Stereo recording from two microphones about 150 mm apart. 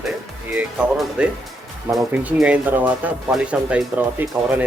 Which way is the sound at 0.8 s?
5° right (ahead or behind).